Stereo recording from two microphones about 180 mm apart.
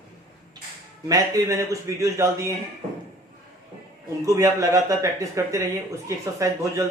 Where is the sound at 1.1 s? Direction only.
20° right (ahead or behind).